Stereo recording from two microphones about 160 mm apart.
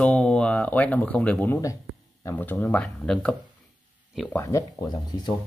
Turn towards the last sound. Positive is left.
turn(degrees=25)  # may be behind; listen again after turning